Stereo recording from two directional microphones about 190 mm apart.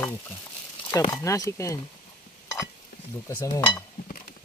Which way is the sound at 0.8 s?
20° left (ahead or behind).